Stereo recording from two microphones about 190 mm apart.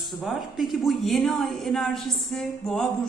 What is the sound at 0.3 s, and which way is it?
A woman's voice, centre (ahead or behind).